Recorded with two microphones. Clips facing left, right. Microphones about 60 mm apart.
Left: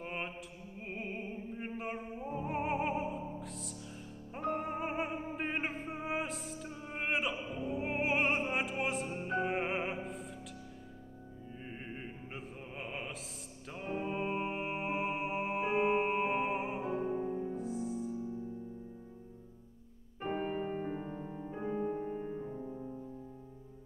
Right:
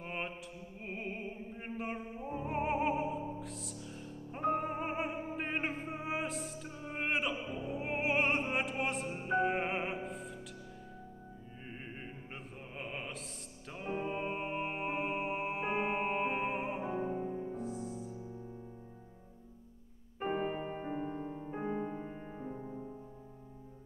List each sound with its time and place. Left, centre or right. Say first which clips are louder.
0.0 s mantra: even; centre
0.8 s music: even; centre
11.6 s music: left 1 dB; centre
20.2 s music: right 1 dB; centre
22.5 s music: left 1 dB; right